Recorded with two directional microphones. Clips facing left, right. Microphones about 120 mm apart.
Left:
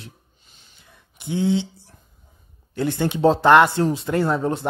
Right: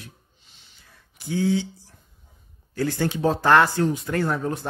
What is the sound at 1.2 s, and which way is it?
Speech, 20° left (ahead or behind).